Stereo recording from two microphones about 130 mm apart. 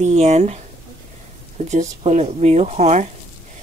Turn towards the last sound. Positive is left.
turn(degrees=-60)  # may be behind; listen again after turning